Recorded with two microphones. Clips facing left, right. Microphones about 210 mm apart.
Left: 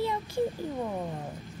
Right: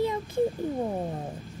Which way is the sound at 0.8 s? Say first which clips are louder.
Right 2 dB; 30° right (ahead or behind).